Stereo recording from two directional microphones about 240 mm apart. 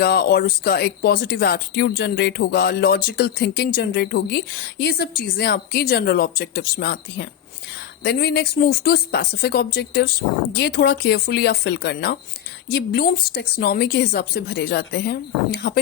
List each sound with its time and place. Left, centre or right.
0.0 s speech: left